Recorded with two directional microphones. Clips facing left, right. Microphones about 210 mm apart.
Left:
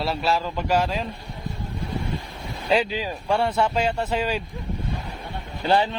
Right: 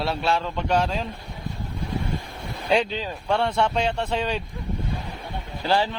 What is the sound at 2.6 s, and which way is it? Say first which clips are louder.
A man's voice: even; 5° left (ahead or behind).